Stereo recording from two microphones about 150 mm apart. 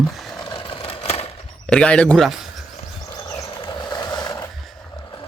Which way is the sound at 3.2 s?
25° left (ahead or behind).